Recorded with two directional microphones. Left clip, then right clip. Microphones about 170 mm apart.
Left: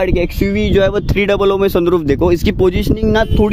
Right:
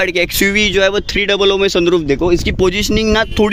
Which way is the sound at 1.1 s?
45° left (ahead or behind).